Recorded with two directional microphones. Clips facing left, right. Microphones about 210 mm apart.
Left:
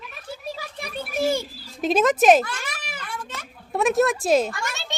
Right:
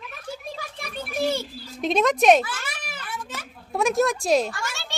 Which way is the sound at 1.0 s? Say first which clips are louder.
Left 2 dB; 10° left (ahead or behind).